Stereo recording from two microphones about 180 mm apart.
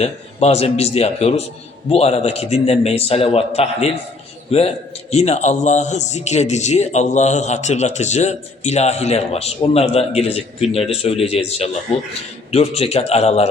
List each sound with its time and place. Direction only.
0.0 s a man's voice: 35° left (ahead or behind)